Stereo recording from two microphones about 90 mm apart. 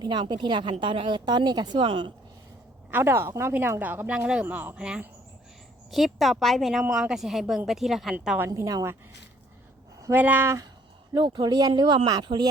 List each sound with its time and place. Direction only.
0.0 s a woman's voice: 55° right (ahead or behind)
2.9 s a woman's voice: 30° right (ahead or behind); by 5.0 s 10° right (ahead or behind)
5.9 s a woman's voice: centre (ahead or behind)
8.4 s a woman's voice: 40° right (ahead or behind)
10.1 s a woman's voice: 20° right (ahead or behind)
11.1 s a woman's voice: 55° right (ahead or behind)